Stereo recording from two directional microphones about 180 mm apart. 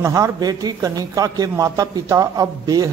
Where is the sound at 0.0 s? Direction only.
20° right (ahead or behind).